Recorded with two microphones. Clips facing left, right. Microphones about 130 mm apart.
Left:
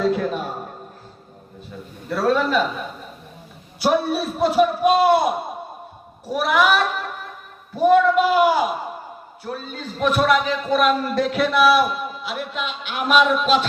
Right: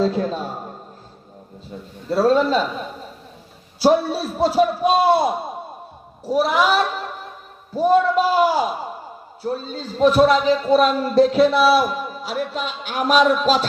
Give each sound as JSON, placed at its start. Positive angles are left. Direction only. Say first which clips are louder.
{"t": 0.0, "sound": "a man's voice", "louder": "even", "side_deg": -30}
{"t": 2.0, "sound": "a man's voice", "louder": "right 3 dB", "side_deg": -25}
{"t": 3.8, "sound": "a man's voice", "louder": "right 3 dB", "side_deg": -30}
{"t": 6.3, "sound": "a man's voice", "louder": "right 1 dB", "side_deg": -30}